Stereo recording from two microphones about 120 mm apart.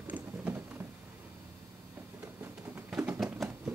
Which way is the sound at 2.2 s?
20° right (ahead or behind).